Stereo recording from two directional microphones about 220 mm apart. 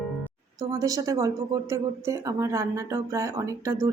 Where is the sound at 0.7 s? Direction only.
15° right (ahead or behind).